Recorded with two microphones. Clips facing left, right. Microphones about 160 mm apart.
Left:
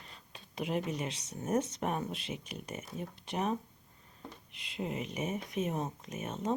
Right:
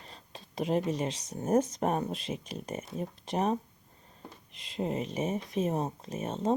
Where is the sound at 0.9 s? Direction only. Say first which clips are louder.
Right 5 dB; 35° right (ahead or behind).